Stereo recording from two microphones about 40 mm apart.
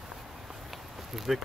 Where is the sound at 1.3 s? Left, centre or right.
Centre.